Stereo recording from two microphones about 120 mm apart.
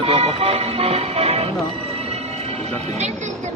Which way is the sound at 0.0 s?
55° right (ahead or behind).